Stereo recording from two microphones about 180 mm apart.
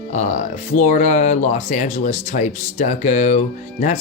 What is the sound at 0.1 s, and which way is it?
Speech, 40° left (ahead or behind).